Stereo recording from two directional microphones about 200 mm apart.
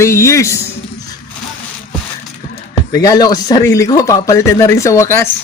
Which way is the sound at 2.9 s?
20° left (ahead or behind).